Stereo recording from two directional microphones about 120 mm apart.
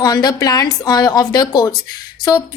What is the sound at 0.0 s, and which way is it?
A woman's voice, 35° left (ahead or behind).